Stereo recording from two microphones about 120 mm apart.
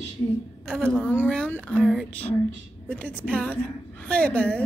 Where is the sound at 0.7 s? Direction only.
5° left (ahead or behind).